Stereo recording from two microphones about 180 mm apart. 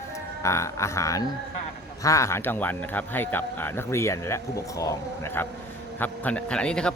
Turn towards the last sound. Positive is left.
turn(degrees=5)  # may be behind; listen again after turning